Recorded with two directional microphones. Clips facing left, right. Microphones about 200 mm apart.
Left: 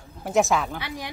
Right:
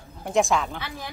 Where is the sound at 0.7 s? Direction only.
15° left (ahead or behind).